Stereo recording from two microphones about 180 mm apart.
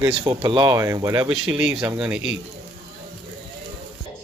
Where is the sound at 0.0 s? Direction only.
20° right (ahead or behind).